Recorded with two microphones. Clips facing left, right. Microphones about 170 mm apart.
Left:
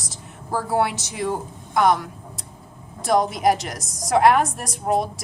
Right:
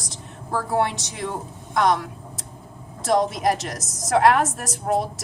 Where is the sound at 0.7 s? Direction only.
5° left (ahead or behind).